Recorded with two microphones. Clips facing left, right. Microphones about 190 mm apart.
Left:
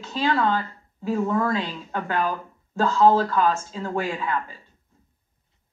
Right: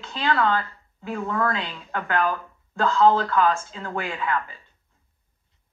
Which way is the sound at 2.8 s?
40° left (ahead or behind).